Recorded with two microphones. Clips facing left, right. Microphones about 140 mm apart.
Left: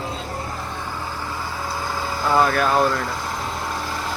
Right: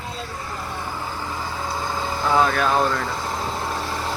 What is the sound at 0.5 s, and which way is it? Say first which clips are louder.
Vehicle: even; 5° right (ahead or behind).